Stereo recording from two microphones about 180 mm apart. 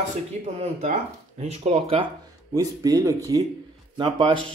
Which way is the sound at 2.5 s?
20° right (ahead or behind).